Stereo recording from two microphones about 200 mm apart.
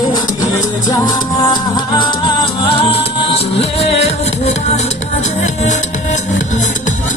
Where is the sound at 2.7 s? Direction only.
25° left (ahead or behind).